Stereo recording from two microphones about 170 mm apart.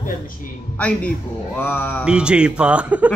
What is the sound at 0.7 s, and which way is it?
Speech, 10° left (ahead or behind).